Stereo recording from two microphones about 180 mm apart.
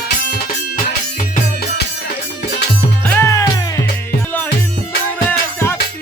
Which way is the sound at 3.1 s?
15° left (ahead or behind).